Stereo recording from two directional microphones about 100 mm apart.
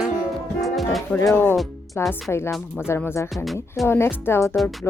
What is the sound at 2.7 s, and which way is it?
Speech, 25° left (ahead or behind).